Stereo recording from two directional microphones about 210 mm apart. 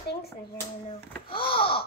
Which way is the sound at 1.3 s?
25° left (ahead or behind).